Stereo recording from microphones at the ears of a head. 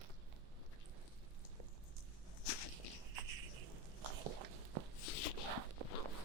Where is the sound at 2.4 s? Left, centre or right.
Left.